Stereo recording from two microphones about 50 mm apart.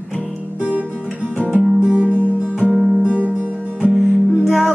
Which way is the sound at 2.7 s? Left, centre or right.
Centre.